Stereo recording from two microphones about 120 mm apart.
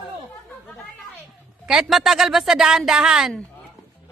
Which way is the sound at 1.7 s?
5° right (ahead or behind).